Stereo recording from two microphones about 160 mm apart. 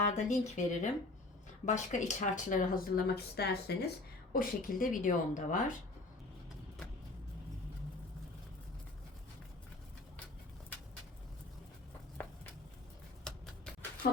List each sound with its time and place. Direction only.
0.0 s speech: 50° left (ahead or behind); by 3.8 s 85° left
4.3 s speech: 65° left (ahead or behind)
12.2 s a sound: 10° left (ahead or behind)
13.3 s typewriter: 5° left (ahead or behind)
14.0 s speech: 65° left (ahead or behind)